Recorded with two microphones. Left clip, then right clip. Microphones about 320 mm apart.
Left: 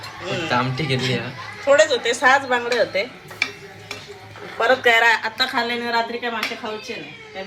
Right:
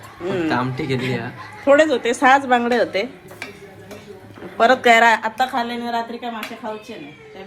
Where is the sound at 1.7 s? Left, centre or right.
Right.